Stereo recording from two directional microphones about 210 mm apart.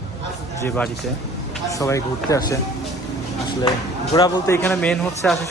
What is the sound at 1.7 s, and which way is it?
Speech, 15° left (ahead or behind).